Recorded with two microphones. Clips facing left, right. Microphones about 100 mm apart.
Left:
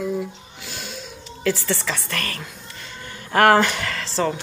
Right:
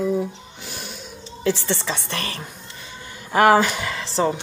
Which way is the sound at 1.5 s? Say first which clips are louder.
Even; 20° right (ahead or behind).